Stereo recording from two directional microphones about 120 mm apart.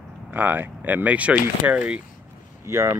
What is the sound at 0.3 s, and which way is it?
Speech, 15° right (ahead or behind).